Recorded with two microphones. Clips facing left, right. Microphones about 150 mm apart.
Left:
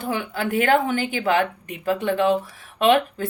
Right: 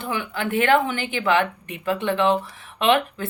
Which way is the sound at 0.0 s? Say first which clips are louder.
Left 1 dB; 45° left (ahead or behind).